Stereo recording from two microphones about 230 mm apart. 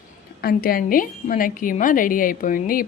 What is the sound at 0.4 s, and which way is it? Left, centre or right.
A woman's voice, left.